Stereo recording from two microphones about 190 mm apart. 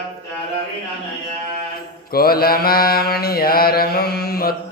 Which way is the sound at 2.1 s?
50° left (ahead or behind).